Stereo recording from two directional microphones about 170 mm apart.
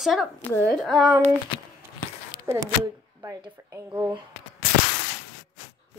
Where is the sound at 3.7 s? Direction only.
15° right (ahead or behind).